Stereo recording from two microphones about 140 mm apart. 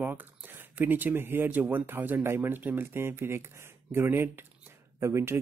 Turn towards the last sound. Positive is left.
turn(degrees=-20)  # may be behind; listen again after turning